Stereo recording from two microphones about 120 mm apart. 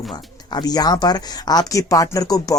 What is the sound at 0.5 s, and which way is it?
Speech, 35° left (ahead or behind).